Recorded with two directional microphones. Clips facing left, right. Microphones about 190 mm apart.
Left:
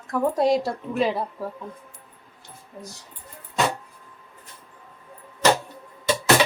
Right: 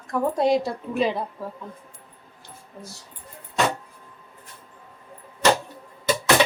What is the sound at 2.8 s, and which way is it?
Speech, 15° left (ahead or behind).